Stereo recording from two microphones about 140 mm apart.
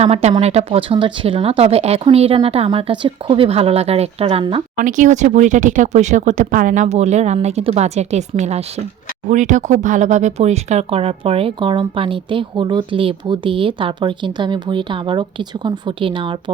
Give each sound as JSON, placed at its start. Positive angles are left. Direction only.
{"t": 0.0, "sound": "speech", "side_deg": -50}
{"t": 4.8, "sound": "speech", "side_deg": -65}